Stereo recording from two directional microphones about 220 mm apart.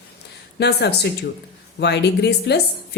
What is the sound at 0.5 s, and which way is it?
A woman's voice, 50° left (ahead or behind).